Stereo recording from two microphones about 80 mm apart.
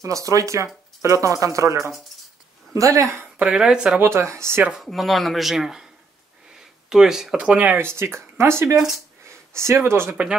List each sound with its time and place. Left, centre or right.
0.0 s speech: right
3.3 s speech: centre
4.0 s speech: right
4.8 s speech: centre
6.9 s speech: centre
7.3 s speech: centre
7.7 s speech: right
8.7 s speech: centre
9.2 s speech: right